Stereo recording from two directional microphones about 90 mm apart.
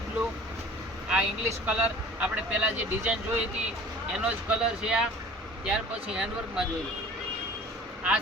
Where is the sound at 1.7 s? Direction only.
15° right (ahead or behind).